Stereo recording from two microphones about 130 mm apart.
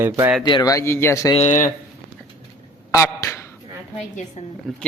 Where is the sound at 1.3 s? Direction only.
65° left (ahead or behind).